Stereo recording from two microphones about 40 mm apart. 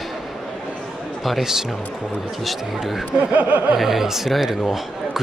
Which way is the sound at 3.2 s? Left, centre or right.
Right.